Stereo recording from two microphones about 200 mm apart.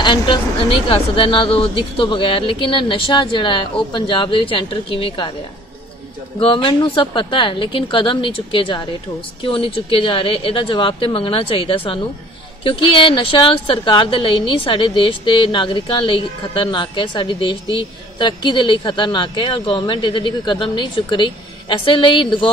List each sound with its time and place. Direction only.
0.0 s a woman's voice: 25° left (ahead or behind)
6.4 s a woman's voice: 25° left (ahead or behind)